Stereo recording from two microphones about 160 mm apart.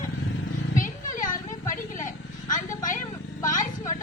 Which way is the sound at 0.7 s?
55° left (ahead or behind).